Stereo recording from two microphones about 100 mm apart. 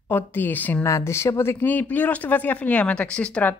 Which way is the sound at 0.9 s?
30° left (ahead or behind).